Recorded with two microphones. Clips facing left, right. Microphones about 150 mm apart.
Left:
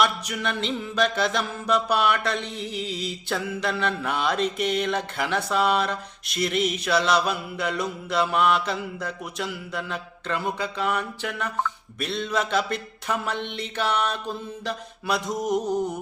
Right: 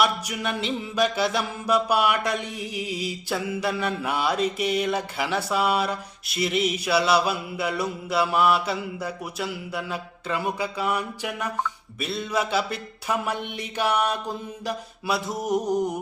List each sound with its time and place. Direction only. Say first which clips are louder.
0.0 s music: even; 10° right (ahead or behind)